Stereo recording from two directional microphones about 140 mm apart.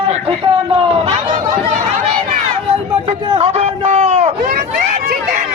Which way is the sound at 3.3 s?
45° right (ahead or behind).